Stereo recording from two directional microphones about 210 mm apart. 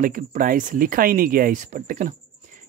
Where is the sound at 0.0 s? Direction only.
40° right (ahead or behind).